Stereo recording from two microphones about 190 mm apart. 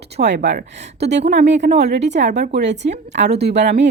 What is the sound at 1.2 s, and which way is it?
Speech, 35° right (ahead or behind).